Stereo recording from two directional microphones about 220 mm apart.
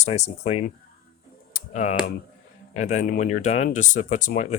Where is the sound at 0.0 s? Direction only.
30° left (ahead or behind).